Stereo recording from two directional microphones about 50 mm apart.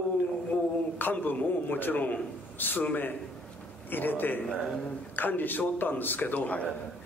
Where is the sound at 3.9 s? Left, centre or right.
Left.